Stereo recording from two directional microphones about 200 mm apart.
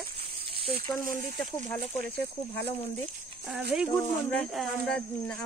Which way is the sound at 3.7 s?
Centre (ahead or behind).